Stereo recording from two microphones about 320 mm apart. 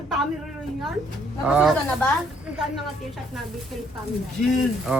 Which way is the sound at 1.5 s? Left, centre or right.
Centre.